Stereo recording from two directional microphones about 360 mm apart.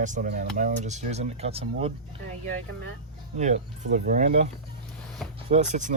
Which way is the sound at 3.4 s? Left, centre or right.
Right.